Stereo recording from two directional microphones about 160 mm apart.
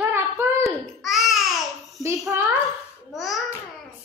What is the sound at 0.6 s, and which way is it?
Babbling, centre (ahead or behind).